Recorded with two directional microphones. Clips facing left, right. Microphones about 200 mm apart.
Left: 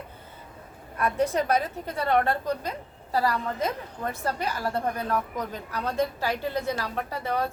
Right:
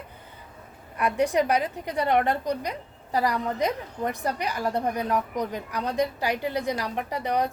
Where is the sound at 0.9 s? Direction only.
15° right (ahead or behind).